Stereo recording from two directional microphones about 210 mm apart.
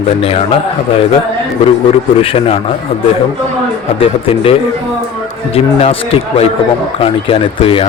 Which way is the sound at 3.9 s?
25° left (ahead or behind).